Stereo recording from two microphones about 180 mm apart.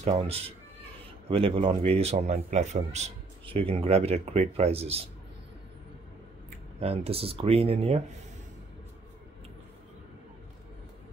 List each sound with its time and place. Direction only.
0.1 s a man's voice: 30° right (ahead or behind)
6.8 s a man's voice: 35° right (ahead or behind)